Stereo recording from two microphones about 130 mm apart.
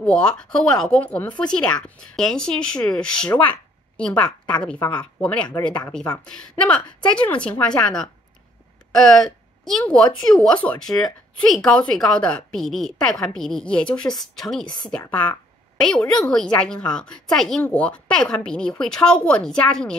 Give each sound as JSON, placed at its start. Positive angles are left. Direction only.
{"t": 0.0, "sound": "a woman's voice", "side_deg": 5}